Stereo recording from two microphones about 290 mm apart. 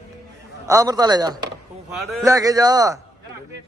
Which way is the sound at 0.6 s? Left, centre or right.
Centre.